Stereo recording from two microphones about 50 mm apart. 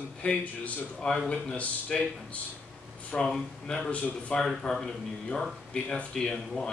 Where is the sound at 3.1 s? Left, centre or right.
Left.